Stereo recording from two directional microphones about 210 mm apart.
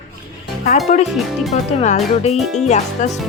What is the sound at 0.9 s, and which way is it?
Speech, 35° left (ahead or behind).